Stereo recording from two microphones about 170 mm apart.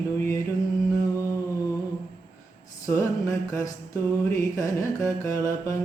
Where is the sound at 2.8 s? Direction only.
20° left (ahead or behind).